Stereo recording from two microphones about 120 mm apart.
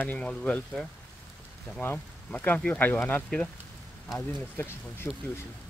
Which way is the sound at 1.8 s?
15° left (ahead or behind).